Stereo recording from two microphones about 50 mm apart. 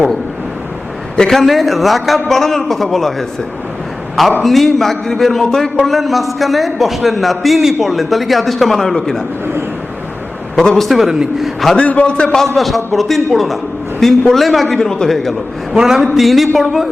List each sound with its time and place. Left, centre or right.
1.3 s a man's voice: centre
10.5 s a man's voice: centre
11.8 s a man's voice: left
12.0 s a man's voice: left
12.5 s a man's voice: centre
14.8 s a man's voice: centre
15.7 s a man's voice: centre
16.1 s a man's voice: centre